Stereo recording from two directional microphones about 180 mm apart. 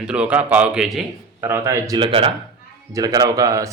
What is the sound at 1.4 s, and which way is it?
Speech, 15° right (ahead or behind).